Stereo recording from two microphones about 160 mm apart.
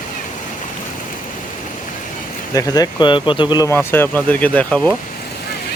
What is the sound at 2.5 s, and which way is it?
Speech, 25° left (ahead or behind).